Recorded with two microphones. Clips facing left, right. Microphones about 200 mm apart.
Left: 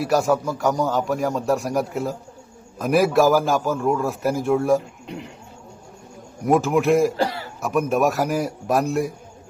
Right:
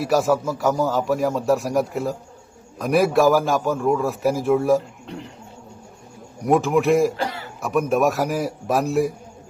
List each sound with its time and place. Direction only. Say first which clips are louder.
0.0 s a man's voice: even; centre (ahead or behind)
6.4 s a man's voice: even; centre (ahead or behind)
7.2 s cough: left 4 dB; 35° left (ahead or behind)
7.6 s a man's voice: right 1 dB; centre (ahead or behind)